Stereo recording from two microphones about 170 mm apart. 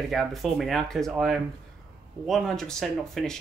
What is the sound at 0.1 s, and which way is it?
Speech, centre (ahead or behind).